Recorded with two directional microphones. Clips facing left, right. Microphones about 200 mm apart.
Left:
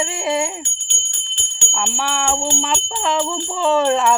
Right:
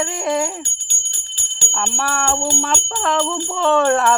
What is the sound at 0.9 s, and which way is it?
Jingle bell, 40° right (ahead or behind).